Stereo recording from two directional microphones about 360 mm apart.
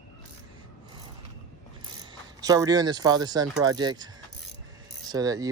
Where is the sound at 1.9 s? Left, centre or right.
Centre.